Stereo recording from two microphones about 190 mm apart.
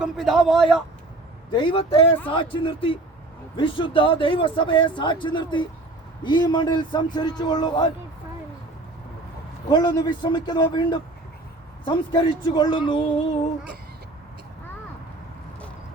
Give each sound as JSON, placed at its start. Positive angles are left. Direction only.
{"t": 0.0, "sound": "a man's voice", "side_deg": 0}
{"t": 1.5, "sound": "speech", "side_deg": 25}
{"t": 9.6, "sound": "speech", "side_deg": 20}